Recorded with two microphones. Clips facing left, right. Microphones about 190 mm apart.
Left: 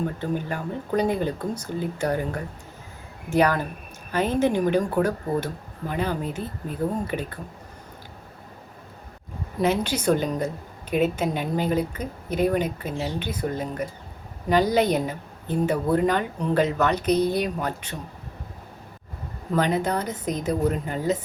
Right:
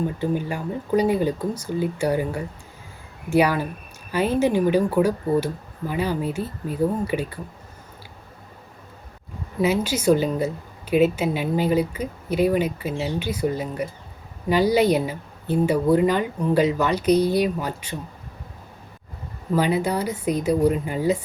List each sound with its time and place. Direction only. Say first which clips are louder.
0.0 s a woman's voice: right 3 dB; 10° right (ahead or behind)
9.6 s a woman's voice: right 2 dB; 5° right (ahead or behind)
19.5 s a woman's voice: right 2 dB; 10° right (ahead or behind)